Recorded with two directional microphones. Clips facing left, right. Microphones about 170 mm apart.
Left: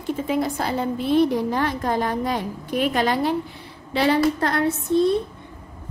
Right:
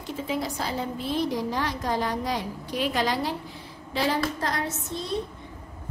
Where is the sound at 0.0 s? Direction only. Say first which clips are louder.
Left 6 dB; 55° left (ahead or behind).